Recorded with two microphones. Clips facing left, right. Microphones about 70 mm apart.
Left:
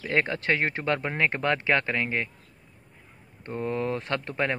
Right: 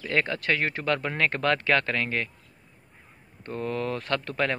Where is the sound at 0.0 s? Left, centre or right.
Left.